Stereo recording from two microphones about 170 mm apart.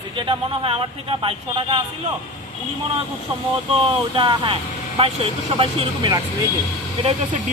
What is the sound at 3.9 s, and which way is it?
Speech, 30° right (ahead or behind).